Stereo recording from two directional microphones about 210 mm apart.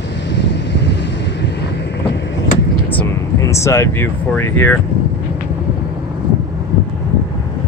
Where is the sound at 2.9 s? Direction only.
10° left (ahead or behind).